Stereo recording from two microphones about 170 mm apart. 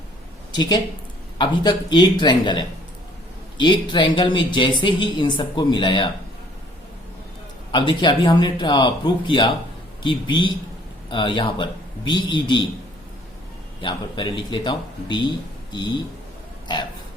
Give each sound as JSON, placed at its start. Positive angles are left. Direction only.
{"t": 0.5, "sound": "speech", "side_deg": 25}
{"t": 7.7, "sound": "speech", "side_deg": 30}
{"t": 13.8, "sound": "speech", "side_deg": 25}